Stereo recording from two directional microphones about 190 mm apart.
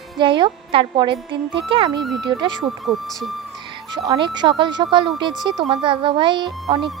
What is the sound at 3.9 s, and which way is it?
Speech, 25° right (ahead or behind).